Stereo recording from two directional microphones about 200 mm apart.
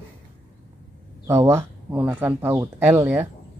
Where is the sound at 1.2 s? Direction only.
15° right (ahead or behind).